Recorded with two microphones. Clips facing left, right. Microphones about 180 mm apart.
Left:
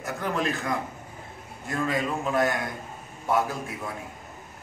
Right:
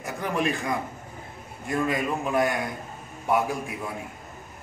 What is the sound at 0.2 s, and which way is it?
A man's voice, 15° right (ahead or behind).